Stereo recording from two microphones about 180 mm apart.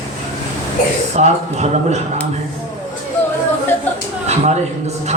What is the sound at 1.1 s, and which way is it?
Speech, 40° right (ahead or behind).